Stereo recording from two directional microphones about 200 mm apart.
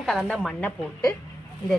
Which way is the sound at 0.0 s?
Centre (ahead or behind).